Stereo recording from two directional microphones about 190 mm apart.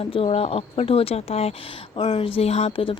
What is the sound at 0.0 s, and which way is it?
A woman's voice, 30° left (ahead or behind).